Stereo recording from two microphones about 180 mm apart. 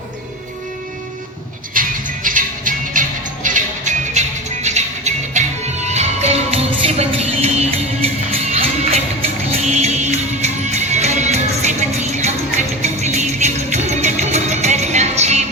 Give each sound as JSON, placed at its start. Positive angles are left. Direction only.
{"t": 1.7, "sound": "music", "side_deg": -50}